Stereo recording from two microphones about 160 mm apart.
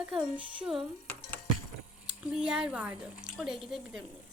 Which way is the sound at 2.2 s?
5° right (ahead or behind).